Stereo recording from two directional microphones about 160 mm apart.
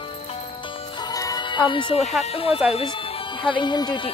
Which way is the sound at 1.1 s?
25° left (ahead or behind).